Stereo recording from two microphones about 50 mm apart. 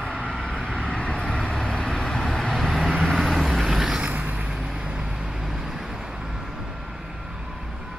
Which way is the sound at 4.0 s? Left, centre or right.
Right.